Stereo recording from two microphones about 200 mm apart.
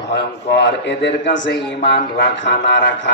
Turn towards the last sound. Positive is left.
turn(degrees=60)  # may be behind; listen again after turning